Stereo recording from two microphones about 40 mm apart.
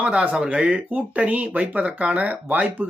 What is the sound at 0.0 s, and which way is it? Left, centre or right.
Speech, right.